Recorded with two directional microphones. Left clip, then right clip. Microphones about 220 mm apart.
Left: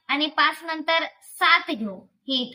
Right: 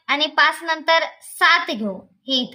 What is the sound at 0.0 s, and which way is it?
A woman's voice, 55° right (ahead or behind).